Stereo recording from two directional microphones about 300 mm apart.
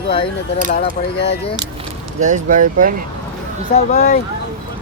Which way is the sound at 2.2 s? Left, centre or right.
Right.